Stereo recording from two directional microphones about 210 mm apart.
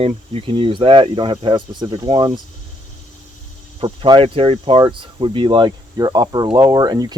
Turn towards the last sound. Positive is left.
turn(degrees=-20)  # may be behind; listen again after turning